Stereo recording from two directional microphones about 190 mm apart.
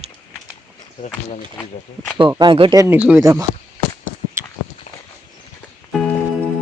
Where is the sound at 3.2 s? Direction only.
20° right (ahead or behind).